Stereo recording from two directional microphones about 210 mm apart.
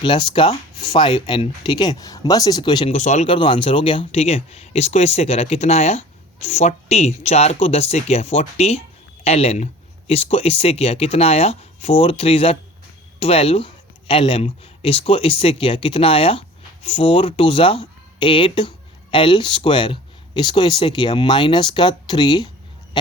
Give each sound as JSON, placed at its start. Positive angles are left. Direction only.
{"t": 0.0, "sound": "speech", "side_deg": 25}
{"t": 2.9, "sound": "speech", "side_deg": 35}